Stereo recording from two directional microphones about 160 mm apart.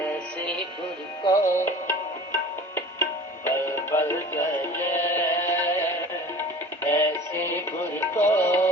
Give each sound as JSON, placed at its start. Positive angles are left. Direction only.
{"t": 0.0, "sound": "music", "side_deg": 10}
{"t": 6.8, "sound": "music", "side_deg": 15}